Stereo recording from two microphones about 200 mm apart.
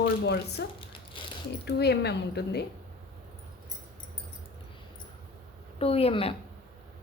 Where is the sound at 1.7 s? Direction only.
55° left (ahead or behind).